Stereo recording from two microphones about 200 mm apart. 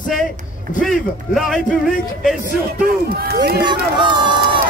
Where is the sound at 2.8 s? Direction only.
50° right (ahead or behind).